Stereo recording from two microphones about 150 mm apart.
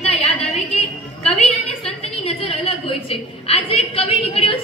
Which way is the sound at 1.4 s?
45° left (ahead or behind).